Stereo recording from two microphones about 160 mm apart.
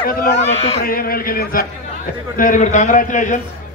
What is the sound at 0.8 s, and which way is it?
Speech, 65° left (ahead or behind).